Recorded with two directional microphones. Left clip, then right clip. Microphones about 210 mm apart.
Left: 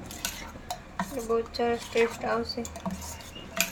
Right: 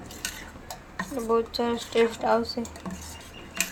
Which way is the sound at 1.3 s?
35° right (ahead or behind).